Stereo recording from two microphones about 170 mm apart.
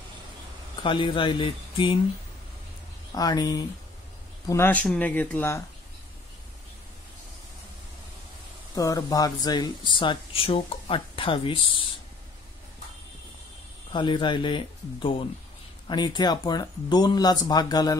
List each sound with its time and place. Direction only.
0.8 s speech: 30° left (ahead or behind)
3.2 s speech: 20° left (ahead or behind)
8.7 s speech: 20° left (ahead or behind)
13.9 s speech: 30° left (ahead or behind)